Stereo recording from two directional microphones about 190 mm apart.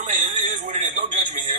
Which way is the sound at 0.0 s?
40° right (ahead or behind).